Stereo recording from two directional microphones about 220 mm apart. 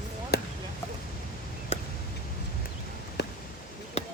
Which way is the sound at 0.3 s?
45° left (ahead or behind).